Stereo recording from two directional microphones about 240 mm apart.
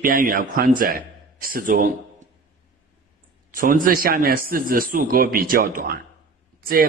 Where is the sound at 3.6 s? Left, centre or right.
Right.